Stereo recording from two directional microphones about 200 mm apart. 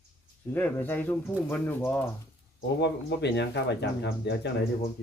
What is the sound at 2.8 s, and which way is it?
Speech, 60° left (ahead or behind).